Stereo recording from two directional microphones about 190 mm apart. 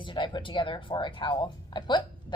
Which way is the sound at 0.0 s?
25° left (ahead or behind).